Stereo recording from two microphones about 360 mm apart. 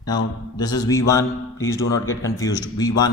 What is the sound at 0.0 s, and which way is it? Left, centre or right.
A man's voice, centre.